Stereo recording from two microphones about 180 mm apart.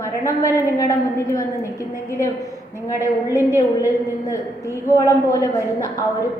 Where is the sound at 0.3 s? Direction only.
15° left (ahead or behind).